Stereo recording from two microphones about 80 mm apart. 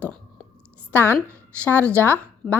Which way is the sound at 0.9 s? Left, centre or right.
Left.